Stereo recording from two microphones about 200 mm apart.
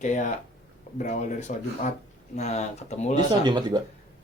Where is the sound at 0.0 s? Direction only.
40° left (ahead or behind).